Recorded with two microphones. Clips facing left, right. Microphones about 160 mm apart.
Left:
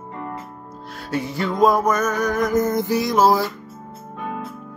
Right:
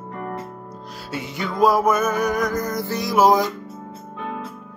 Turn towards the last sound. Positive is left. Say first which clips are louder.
# right 1 dB
turn(degrees=-15)  # may be behind; listen again after turning